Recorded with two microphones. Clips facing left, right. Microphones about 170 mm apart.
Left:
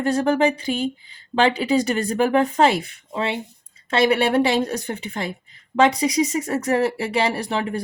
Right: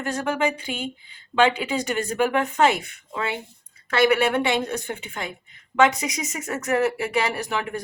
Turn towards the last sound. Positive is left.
turn(degrees=30)  # may be behind; listen again after turning